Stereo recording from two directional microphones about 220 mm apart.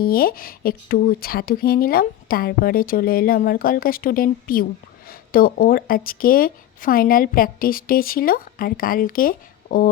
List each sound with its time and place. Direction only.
0.0 s speech: 45° left (ahead or behind)